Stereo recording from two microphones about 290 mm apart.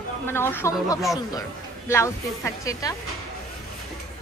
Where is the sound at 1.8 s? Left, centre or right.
Centre.